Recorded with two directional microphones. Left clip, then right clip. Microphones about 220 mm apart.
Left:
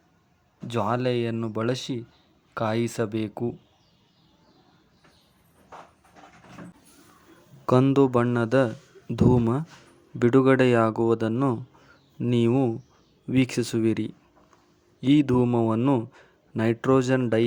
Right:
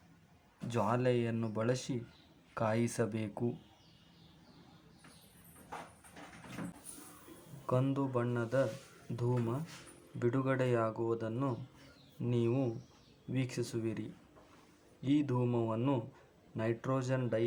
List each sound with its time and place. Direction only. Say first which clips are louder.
0.7 s speech: left 7 dB; 30° left (ahead or behind)
7.7 s a man's voice: left 14 dB; 40° left (ahead or behind)